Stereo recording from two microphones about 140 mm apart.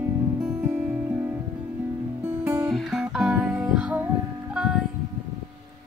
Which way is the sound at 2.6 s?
Centre (ahead or behind).